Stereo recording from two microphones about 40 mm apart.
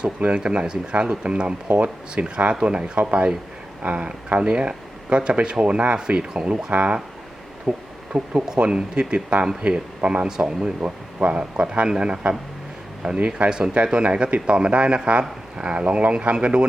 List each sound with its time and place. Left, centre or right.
0.3 s speech: right
3.8 s speech: right
4.4 s speech: right
6.7 s speech: right
7.7 s speech: right
10.8 s speech: right